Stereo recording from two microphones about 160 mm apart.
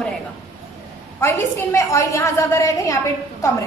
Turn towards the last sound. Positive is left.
turn(degrees=20)  # may be behind; listen again after turning